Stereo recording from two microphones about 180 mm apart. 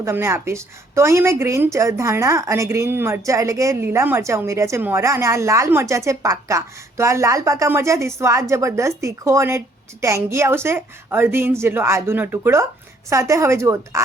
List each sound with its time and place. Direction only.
0.0 s a woman's voice: 15° right (ahead or behind)